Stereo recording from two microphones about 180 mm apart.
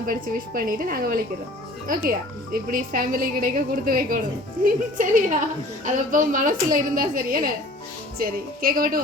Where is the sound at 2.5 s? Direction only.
50° right (ahead or behind).